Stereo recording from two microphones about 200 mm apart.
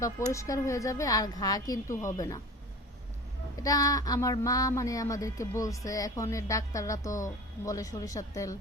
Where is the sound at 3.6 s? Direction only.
15° left (ahead or behind).